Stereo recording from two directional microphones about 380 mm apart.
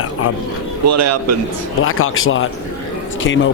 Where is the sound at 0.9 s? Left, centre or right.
Right.